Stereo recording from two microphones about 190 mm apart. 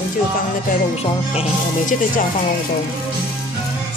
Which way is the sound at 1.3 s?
35° left (ahead or behind).